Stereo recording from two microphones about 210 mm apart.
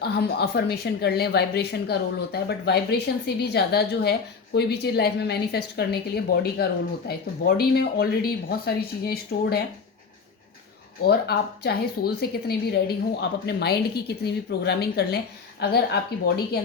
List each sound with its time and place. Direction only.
0.0 s speech: 50° left (ahead or behind)
11.0 s speech: 50° left (ahead or behind)